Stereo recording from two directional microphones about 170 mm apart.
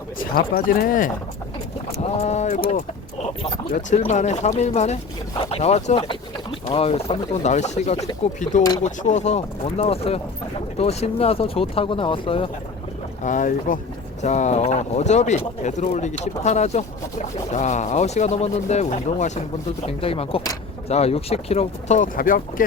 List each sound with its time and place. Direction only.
0.2 s speech: 60° left (ahead or behind)
2.0 s speech: 40° left (ahead or behind)
3.8 s speech: 45° left (ahead or behind)
9.0 s speech: 45° left (ahead or behind)
13.2 s speech: 50° left (ahead or behind)